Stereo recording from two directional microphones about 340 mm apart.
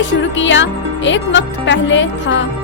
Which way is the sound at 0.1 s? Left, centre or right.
Left.